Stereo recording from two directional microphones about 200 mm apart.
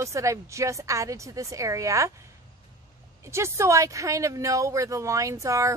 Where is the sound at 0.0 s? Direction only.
15° right (ahead or behind).